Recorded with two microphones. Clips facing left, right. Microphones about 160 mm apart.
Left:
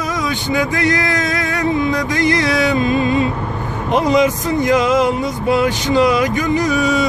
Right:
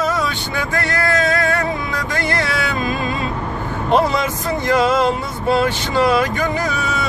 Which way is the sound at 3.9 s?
15° left (ahead or behind).